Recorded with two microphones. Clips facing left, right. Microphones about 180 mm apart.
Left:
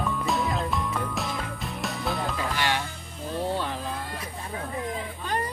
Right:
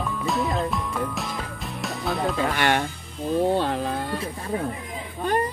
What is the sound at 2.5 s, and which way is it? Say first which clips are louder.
Music: right 4 dB; 55° right (ahead or behind).